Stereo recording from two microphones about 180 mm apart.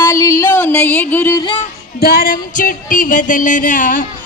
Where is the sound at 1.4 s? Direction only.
25° left (ahead or behind).